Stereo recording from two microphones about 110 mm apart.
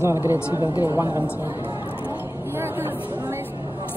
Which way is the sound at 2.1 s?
20° right (ahead or behind).